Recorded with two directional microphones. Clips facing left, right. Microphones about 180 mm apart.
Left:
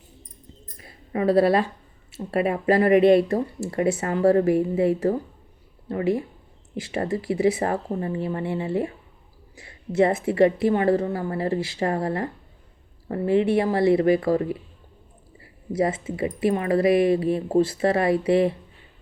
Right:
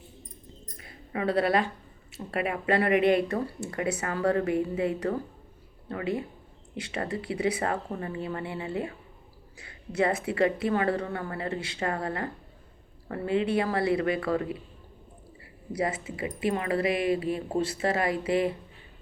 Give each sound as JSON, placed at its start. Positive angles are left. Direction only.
{"t": 0.8, "sound": "a sound", "side_deg": 30}
{"t": 2.1, "sound": "a woman's voice", "side_deg": 30}
{"t": 15.7, "sound": "a woman's voice", "side_deg": 25}